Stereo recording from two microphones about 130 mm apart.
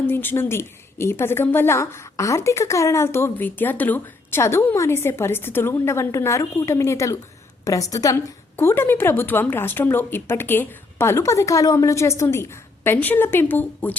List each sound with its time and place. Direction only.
0.1 s a woman's voice: 15° left (ahead or behind)